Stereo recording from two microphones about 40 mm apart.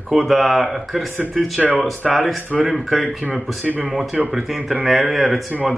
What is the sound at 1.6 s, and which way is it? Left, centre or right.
Speech, right.